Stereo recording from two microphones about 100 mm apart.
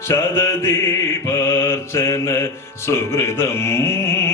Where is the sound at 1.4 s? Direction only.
25° left (ahead or behind).